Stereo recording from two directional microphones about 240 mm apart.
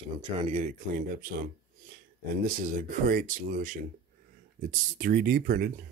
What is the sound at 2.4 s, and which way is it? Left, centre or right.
Speech, right.